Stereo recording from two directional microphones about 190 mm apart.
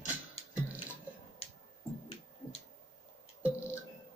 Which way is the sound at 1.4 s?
30° left (ahead or behind).